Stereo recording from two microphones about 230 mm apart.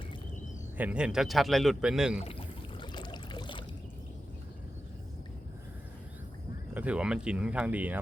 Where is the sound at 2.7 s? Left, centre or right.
Centre.